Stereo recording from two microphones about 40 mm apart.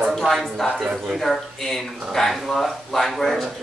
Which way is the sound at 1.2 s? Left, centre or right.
Centre.